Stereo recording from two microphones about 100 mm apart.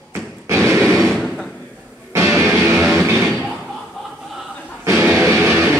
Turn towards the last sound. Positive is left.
turn(degrees=-20)  # may be behind; listen again after turning